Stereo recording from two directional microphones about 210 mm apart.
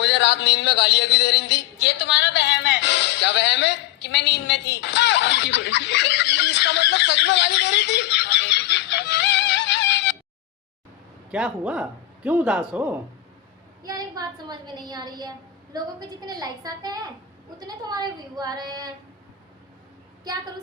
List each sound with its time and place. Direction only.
0.0 s speech: 55° left (ahead or behind)
2.0 s music: 55° left (ahead or behind)
9.6 s a sound: 55° left (ahead or behind)
11.3 s speech: 5° right (ahead or behind)
13.8 s a woman's voice: 20° right (ahead or behind)